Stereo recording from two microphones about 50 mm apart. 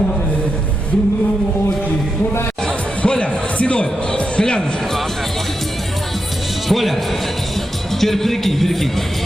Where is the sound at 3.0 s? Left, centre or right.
Left.